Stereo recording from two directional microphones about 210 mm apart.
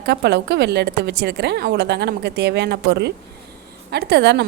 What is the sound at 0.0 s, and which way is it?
A woman's voice, 50° right (ahead or behind).